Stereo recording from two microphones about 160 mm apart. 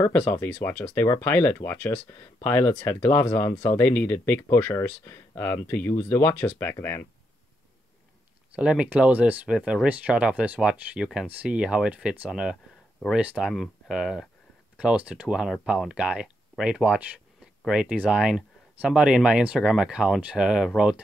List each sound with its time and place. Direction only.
0.3 s speech: 15° left (ahead or behind)
8.5 s speech: 5° right (ahead or behind)